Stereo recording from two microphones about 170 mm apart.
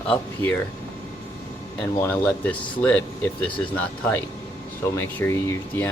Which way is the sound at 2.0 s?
10° left (ahead or behind).